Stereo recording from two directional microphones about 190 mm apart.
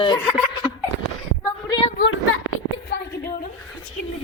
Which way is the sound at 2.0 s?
90° left.